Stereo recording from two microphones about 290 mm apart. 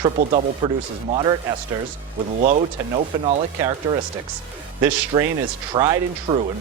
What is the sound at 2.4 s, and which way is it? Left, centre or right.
Speech, right.